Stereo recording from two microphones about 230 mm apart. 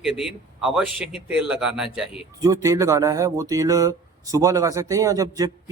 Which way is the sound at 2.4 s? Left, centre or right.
Centre.